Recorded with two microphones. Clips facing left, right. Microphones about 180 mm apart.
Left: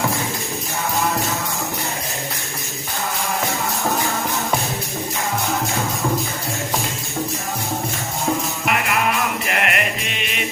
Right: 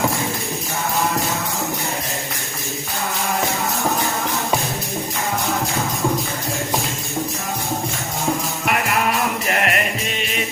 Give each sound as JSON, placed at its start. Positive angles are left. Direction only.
{"t": 9.5, "sound": "music", "side_deg": -40}